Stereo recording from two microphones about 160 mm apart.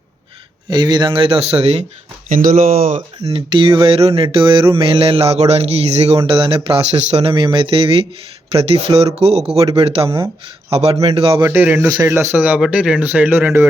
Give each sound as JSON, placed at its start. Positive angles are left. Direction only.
{"t": 0.7, "sound": "mantra", "side_deg": -25}
{"t": 2.3, "sound": "speech", "side_deg": -60}
{"t": 3.2, "sound": "mantra", "side_deg": -35}
{"t": 11.3, "sound": "speech", "side_deg": -15}